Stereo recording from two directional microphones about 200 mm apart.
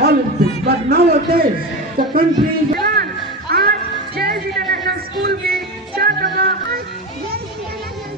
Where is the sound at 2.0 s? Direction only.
45° right (ahead or behind).